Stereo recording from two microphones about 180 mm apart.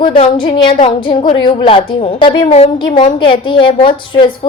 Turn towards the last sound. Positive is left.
turn(degrees=30)  # may be behind; listen again after turning